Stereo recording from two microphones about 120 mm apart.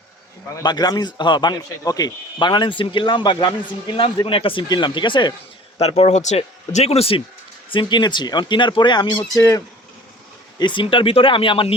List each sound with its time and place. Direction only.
0.6 s speech: 35° left (ahead or behind)
5.8 s speech: 60° left (ahead or behind)
7.7 s speech: 40° left (ahead or behind)
9.1 s speech: 25° left (ahead or behind)
10.6 s speech: 40° left (ahead or behind)